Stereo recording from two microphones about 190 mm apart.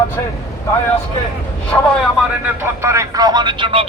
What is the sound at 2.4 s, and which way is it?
Speech, 15° right (ahead or behind).